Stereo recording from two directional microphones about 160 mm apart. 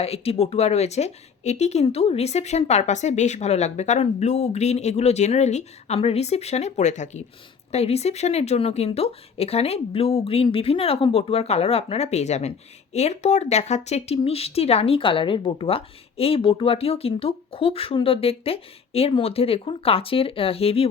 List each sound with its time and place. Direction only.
0.0 s speech: 40° left (ahead or behind)